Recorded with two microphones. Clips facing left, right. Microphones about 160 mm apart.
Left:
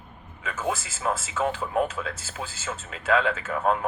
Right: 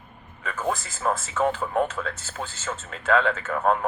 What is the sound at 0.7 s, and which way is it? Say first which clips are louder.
A man's voice: right 2 dB; 40° right (ahead or behind).